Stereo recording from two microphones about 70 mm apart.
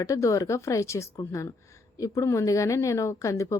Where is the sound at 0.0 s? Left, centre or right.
Left.